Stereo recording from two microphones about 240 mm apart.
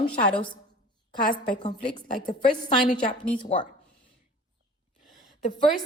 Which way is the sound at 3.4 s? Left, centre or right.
Left.